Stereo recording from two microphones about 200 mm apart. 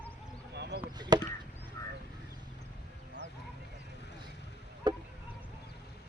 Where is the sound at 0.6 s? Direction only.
60° right (ahead or behind).